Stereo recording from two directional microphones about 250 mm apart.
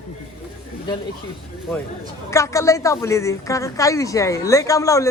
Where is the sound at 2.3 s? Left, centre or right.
Centre.